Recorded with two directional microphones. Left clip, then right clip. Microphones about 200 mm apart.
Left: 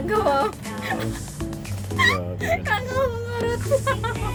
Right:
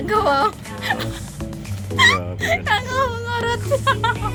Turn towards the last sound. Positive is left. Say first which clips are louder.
# right 4 dB
turn(degrees=15)  # may be behind; listen again after turning